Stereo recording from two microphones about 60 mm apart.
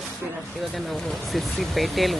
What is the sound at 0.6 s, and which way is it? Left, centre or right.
A woman's voice, centre.